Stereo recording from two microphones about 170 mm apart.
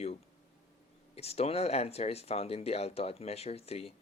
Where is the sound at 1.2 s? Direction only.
35° left (ahead or behind).